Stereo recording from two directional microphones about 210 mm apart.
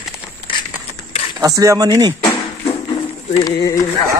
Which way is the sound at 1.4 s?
15° right (ahead or behind).